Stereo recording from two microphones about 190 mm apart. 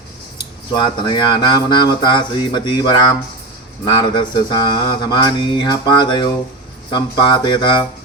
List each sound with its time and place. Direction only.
0.3 s speech: 25° left (ahead or behind)